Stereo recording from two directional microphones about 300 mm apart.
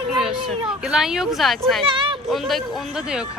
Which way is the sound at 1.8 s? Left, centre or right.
Centre.